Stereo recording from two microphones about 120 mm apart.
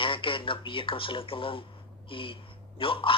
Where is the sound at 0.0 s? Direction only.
45° left (ahead or behind).